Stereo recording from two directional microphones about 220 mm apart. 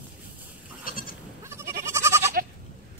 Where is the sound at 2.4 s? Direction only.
45° right (ahead or behind).